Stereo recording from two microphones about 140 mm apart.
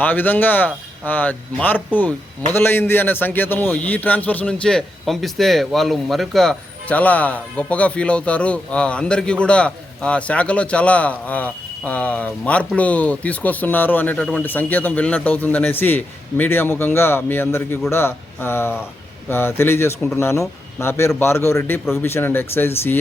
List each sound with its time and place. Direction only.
0.0 s a man's voice: 15° left (ahead or behind)